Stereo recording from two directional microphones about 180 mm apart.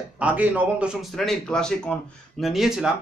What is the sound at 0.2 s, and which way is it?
Speech, 10° right (ahead or behind).